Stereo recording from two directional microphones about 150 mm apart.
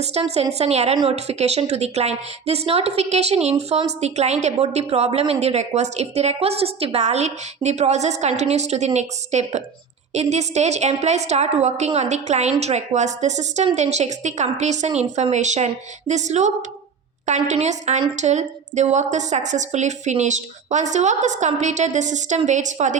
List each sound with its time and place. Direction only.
0.0 s a woman's voice: 45° right (ahead or behind)